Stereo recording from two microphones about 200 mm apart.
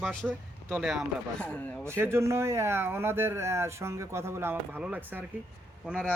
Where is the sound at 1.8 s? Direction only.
10° right (ahead or behind).